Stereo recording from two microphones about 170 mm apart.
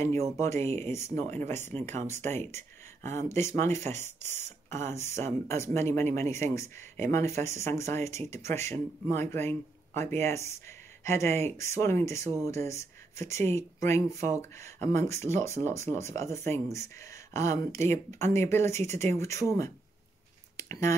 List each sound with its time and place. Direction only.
0.4 s speech: 15° left (ahead or behind)
1.7 s speech: 35° right (ahead or behind)
2.0 s speech: 15° left (ahead or behind)
4.4 s speech: 40° right (ahead or behind)
4.7 s speech: 15° left (ahead or behind)
20.5 s a sound: 20° left (ahead or behind)